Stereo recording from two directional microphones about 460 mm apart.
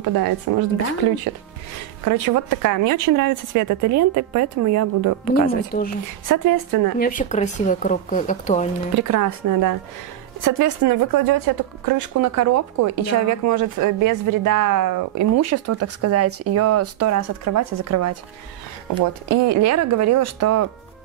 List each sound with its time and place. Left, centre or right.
0.0 s speech: right
2.0 s speech: right
5.3 s speech: centre
6.2 s speech: right
7.0 s speech: centre
8.9 s speech: right
19.2 s speech: right